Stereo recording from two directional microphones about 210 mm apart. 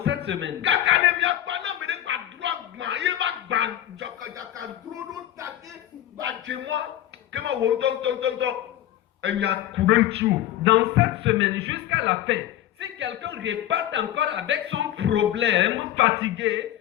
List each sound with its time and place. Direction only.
0.3 s battle cry: 60° right (ahead or behind)
6.2 s a man's voice: 60° right (ahead or behind)